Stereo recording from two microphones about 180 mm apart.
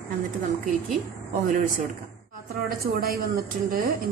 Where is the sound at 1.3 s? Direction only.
50° right (ahead or behind).